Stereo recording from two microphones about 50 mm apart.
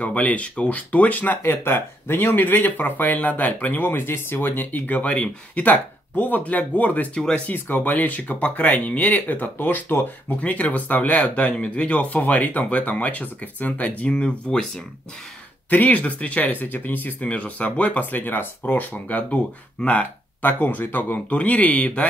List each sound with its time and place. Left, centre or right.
0.0 s speech: left
1.4 s speech: left
7.2 s speech: centre
7.4 s speech: left; by 14.7 s centre
15.7 s speech: left
20.4 s speech: left
21.3 s speech: left